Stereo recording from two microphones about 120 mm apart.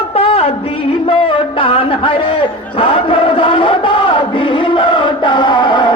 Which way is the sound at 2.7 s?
50° left (ahead or behind).